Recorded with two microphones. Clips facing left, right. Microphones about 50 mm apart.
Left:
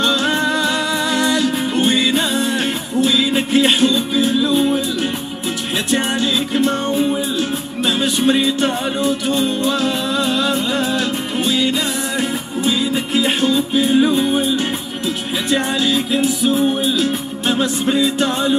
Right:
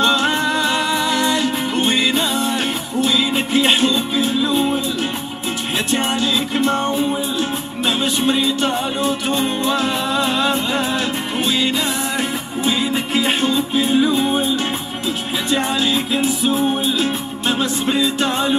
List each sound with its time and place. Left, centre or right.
0.0 s music: right
6.5 s music: right
8.0 s music: right
8.4 s music: left
9.0 s music: right
15.5 s music: right